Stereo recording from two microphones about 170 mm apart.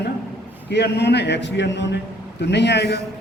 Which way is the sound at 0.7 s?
80° left.